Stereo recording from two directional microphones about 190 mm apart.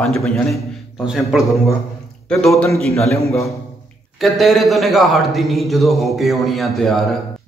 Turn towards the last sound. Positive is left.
turn(degrees=0)  # may be behind; listen again after turning